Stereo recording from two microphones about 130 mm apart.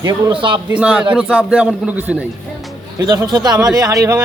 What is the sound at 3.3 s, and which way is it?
Speech, 35° right (ahead or behind).